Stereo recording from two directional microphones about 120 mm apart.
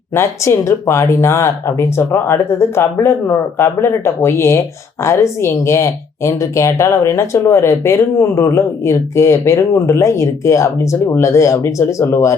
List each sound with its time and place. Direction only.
0.1 s speech: 20° left (ahead or behind)